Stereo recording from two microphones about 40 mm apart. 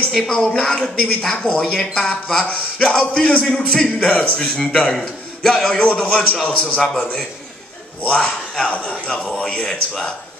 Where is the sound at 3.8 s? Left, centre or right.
Left.